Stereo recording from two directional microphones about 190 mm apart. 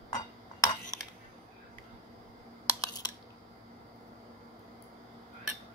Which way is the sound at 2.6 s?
20° left (ahead or behind).